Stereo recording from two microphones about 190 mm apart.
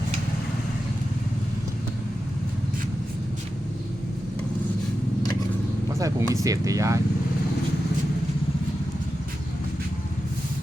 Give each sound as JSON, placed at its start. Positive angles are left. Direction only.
{"t": 6.0, "sound": "speech", "side_deg": -15}